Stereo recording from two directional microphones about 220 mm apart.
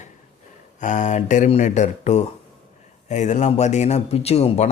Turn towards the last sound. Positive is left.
turn(degrees=30)  # may be behind; listen again after turning